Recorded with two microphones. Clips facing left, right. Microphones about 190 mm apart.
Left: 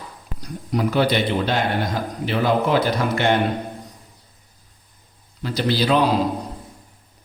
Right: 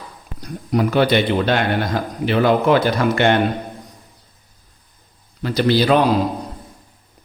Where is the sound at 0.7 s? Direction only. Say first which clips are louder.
Right 3 dB; 60° right (ahead or behind).